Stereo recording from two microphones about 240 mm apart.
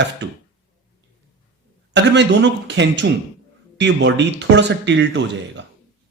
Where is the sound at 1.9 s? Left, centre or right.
Right.